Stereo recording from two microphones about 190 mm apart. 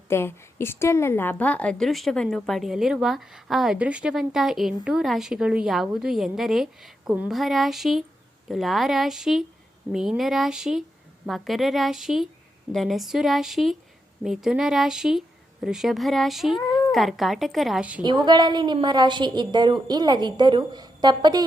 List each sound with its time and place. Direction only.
0.1 s a woman's voice: 15° left (ahead or behind); by 18.0 s 5° right (ahead or behind)
18.0 s a woman's voice: 25° right (ahead or behind)